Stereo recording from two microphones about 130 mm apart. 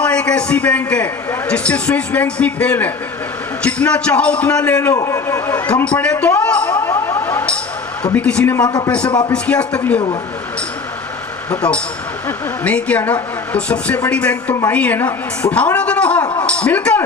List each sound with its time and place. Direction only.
0.0 s a man's voice: 10° left (ahead or behind)
4.9 s a man's voice: 25° left (ahead or behind)
8.5 s a man's voice: 30° left (ahead or behind)
9.3 s a man's voice: 10° left (ahead or behind)
11.5 s a man's voice: 10° left (ahead or behind)